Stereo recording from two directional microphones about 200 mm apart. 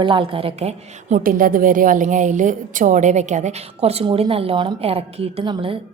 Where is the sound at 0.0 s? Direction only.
25° right (ahead or behind).